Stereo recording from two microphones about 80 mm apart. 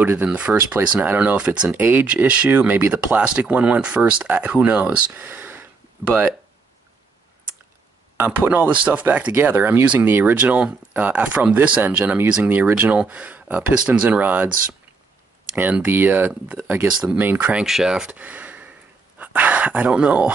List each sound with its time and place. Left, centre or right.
0.0 s speech: right
8.2 s speech: right
15.5 s speech: right
17.6 s speech: centre
19.1 s a sound: centre
19.9 s speech: centre